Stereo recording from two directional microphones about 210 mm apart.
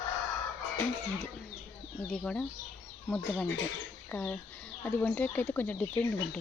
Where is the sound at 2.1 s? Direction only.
5° left (ahead or behind).